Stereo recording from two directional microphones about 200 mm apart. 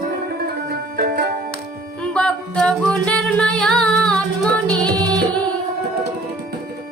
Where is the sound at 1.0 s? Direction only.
50° right (ahead or behind).